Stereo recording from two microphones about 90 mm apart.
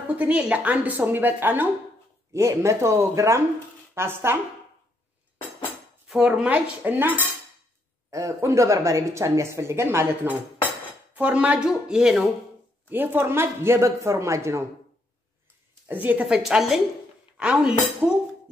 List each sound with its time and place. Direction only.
0.1 s speech: 15° right (ahead or behind)
6.0 s speech: 10° right (ahead or behind)
6.8 s speech: 25° right (ahead or behind)
8.1 s speech: 35° right (ahead or behind); by 12.3 s 5° right (ahead or behind)
12.9 s speech: 20° right (ahead or behind)
15.9 s speech: 20° right (ahead or behind)
16.4 s a woman's voice: 5° right (ahead or behind)